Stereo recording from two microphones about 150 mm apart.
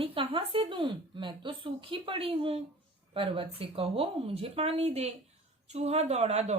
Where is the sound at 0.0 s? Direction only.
35° right (ahead or behind).